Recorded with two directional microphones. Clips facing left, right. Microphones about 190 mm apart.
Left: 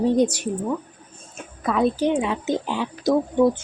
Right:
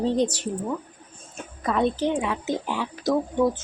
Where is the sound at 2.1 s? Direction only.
20° left (ahead or behind).